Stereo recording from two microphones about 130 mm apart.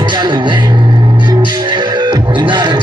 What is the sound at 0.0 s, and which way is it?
Speech, 35° right (ahead or behind).